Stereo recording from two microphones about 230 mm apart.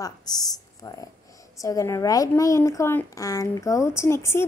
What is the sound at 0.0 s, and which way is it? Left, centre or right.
Speech, centre.